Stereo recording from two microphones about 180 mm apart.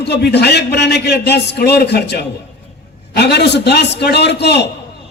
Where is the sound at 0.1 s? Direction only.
65° left (ahead or behind).